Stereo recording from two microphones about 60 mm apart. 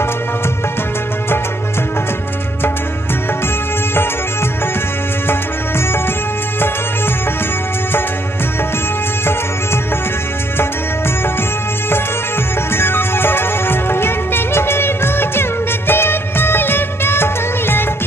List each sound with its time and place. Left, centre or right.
12.7 s music: left
15.9 s music of bollywood: left